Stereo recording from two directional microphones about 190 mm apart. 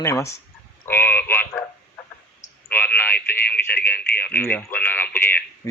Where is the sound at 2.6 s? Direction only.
10° left (ahead or behind).